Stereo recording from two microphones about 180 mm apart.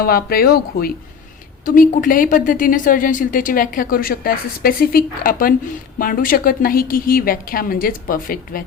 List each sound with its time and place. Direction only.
0.0 s a woman's voice: 55° left (ahead or behind)